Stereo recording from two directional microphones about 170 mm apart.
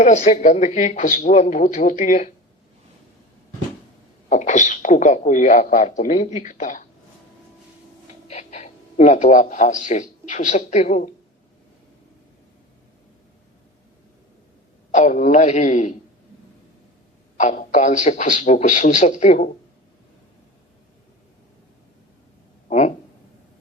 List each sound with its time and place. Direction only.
0.0 s speech: 45° left (ahead or behind)
4.3 s speech: 45° left (ahead or behind)
8.3 s a man's voice: 45° left (ahead or behind)
14.9 s speech: 45° left (ahead or behind)
17.4 s speech: 50° left (ahead or behind)